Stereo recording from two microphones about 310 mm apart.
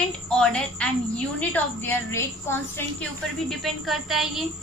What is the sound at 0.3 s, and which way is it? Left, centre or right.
A woman's voice, centre.